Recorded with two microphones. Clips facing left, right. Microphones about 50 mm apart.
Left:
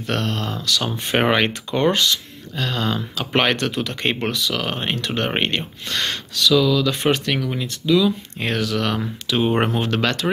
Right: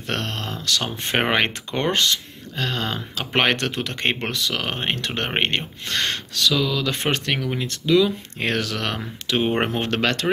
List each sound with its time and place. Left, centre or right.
0.0 s speech: right
6.5 s speech: right
6.9 s speech: right
7.3 s speech: right
7.6 s speech: right
9.4 s speech: right
9.8 s speech: right